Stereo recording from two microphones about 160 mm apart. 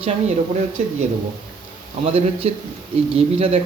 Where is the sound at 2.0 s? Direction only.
40° right (ahead or behind).